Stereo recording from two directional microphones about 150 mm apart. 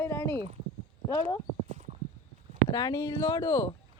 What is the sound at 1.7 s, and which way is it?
Clip-clop, 60° right (ahead or behind).